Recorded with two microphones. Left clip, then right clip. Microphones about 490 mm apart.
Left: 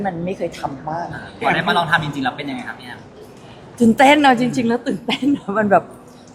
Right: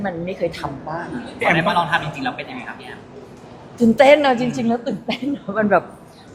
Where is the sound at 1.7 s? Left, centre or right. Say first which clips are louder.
Left 2 dB; left.